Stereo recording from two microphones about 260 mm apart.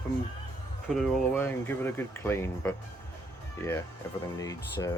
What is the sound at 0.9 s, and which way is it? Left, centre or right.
Speech, centre.